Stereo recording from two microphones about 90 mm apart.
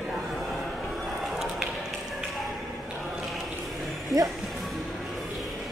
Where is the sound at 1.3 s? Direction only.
Centre (ahead or behind).